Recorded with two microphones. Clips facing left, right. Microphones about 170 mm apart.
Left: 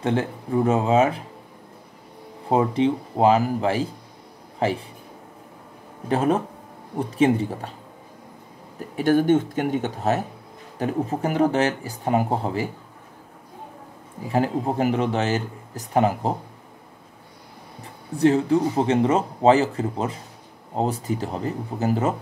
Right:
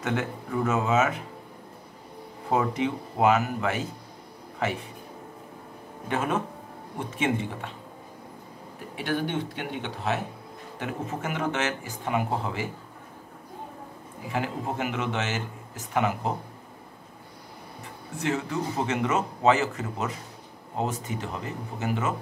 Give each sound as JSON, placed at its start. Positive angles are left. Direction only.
{"t": 0.0, "sound": "speech", "side_deg": 30}
{"t": 2.5, "sound": "speech", "side_deg": 30}
{"t": 6.0, "sound": "speech", "side_deg": 35}
{"t": 8.9, "sound": "speech", "side_deg": 45}
{"t": 14.3, "sound": "speech", "side_deg": 35}
{"t": 18.1, "sound": "speech", "side_deg": 35}